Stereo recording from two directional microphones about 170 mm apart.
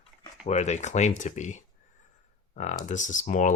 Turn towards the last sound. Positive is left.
turn(degrees=50)  # may be behind; listen again after turning